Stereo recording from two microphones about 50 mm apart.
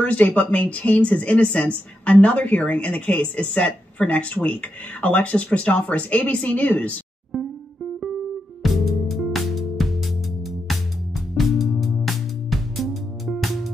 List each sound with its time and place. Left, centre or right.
0.0 s speech: left
7.3 s music: centre
8.6 s music: centre